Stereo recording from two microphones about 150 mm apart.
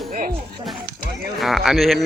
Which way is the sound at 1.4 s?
Centre (ahead or behind).